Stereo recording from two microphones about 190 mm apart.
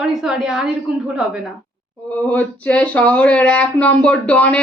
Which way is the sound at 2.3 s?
10° left (ahead or behind).